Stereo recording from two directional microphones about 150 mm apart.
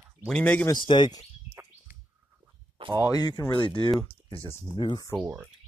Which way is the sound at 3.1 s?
25° left (ahead or behind).